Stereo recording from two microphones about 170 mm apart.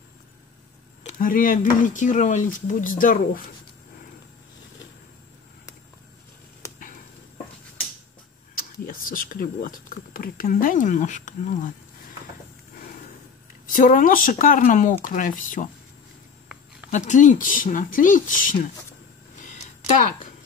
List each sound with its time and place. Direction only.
1.0 s speech: 55° left (ahead or behind)
6.6 s a sound: 15° left (ahead or behind)
8.8 s speech: 55° left (ahead or behind)
13.7 s speech: 55° left (ahead or behind)
16.9 s speech: 45° left (ahead or behind)